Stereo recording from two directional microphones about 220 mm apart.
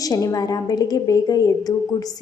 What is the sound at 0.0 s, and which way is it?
A woman's voice, 15° left (ahead or behind).